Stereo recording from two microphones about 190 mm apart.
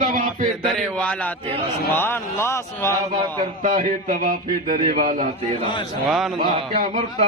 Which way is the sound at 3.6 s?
45° right (ahead or behind).